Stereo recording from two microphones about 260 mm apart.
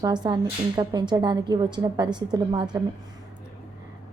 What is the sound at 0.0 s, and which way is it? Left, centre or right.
A woman's voice, centre.